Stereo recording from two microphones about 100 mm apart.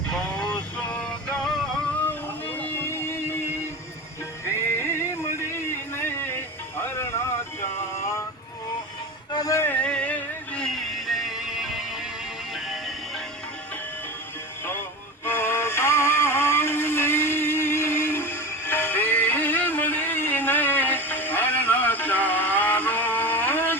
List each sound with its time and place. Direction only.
0.1 s vehicle: 10° left (ahead or behind)
2.0 s music: 20° left (ahead or behind)
4.8 s music: 25° left (ahead or behind)
5.5 s a sound: 25° left (ahead or behind)
6.8 s music: 25° left (ahead or behind)
9.3 s music: 40° left (ahead or behind)
9.6 s music: 15° left (ahead or behind); by 13.2 s 5° right (ahead or behind)
15.2 s music: 25° left (ahead or behind)